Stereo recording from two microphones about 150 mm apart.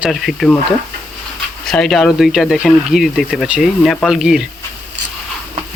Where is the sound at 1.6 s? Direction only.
5° left (ahead or behind).